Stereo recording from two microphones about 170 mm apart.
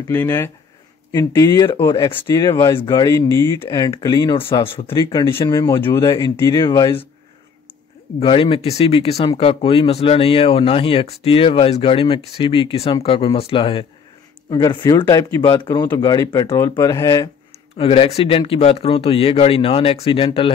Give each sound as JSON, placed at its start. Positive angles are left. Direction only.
{"t": 0.1, "sound": "speech", "side_deg": 15}
{"t": 5.1, "sound": "speech", "side_deg": 20}
{"t": 8.2, "sound": "speech", "side_deg": 30}
{"t": 17.5, "sound": "speech", "side_deg": 35}